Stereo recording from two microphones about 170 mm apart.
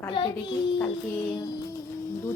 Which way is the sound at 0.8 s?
10° left (ahead or behind).